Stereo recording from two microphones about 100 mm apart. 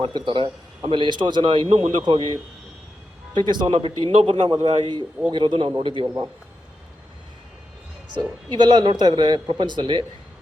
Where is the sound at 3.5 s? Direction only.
50° right (ahead or behind).